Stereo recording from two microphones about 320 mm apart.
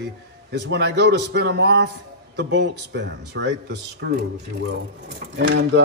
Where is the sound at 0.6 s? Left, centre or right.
Right.